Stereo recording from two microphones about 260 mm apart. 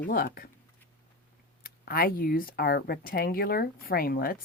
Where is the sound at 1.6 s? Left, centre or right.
Left.